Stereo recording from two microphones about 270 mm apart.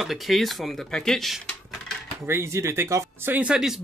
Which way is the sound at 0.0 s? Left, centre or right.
Centre.